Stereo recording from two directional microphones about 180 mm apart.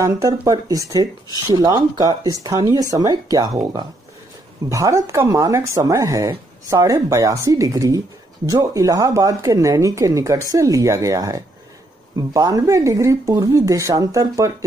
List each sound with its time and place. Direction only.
0.0 s speech: 15° right (ahead or behind)